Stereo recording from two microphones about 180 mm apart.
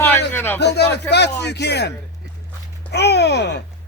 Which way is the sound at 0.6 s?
70° left (ahead or behind).